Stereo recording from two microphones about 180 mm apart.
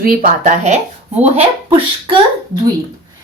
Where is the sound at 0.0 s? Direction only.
50° right (ahead or behind); by 2.1 s 35° right (ahead or behind).